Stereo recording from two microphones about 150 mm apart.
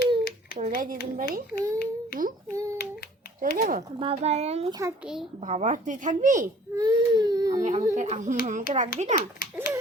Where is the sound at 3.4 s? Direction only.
65° right (ahead or behind).